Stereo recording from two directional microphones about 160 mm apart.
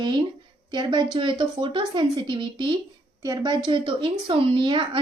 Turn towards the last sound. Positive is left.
turn(degrees=-30)  # may be behind; listen again after turning